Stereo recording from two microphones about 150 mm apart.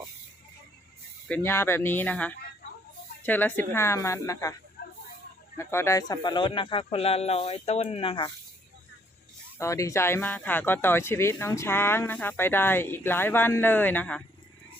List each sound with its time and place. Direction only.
1.3 s speech: 15° left (ahead or behind)
4.8 s a sound: 80° left
5.5 s speech: 15° left (ahead or behind); by 8.3 s 35° left (ahead or behind)
9.6 s speech: 20° left (ahead or behind)